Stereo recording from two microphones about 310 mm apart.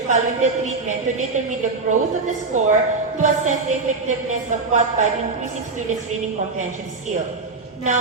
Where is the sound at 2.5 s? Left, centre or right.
Right.